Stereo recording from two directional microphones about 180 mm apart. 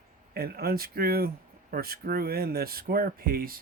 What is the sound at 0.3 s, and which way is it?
Speech, 55° right (ahead or behind).